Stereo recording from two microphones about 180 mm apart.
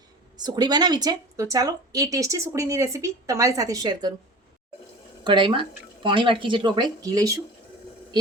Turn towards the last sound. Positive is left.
turn(degrees=-20)  # may be behind; listen again after turning